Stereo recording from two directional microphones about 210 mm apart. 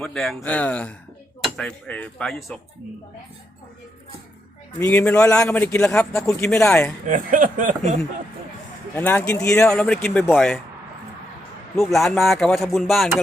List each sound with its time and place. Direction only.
0.0 s speech: centre (ahead or behind)
4.8 s a man's voice: 10° left (ahead or behind)
7.0 s speech: 40° right (ahead or behind)
9.0 s a man's voice: 10° left (ahead or behind)
11.8 s speech: centre (ahead or behind)